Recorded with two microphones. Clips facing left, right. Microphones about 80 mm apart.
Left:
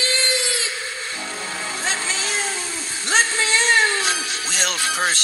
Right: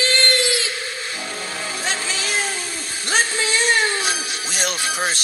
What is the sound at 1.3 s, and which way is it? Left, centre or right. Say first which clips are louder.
Music: even; right.